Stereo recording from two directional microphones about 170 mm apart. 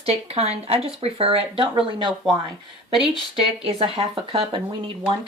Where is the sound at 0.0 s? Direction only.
35° right (ahead or behind).